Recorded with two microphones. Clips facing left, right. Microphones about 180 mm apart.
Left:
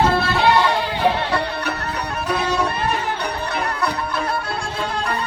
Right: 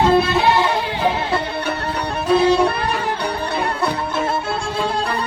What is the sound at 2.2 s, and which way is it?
Music, 30° right (ahead or behind).